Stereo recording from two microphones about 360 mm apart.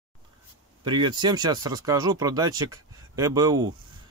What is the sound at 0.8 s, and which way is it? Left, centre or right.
Speech, centre.